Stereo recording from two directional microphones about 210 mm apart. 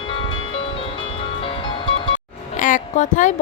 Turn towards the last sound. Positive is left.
turn(degrees=35)  # may be behind; listen again after turning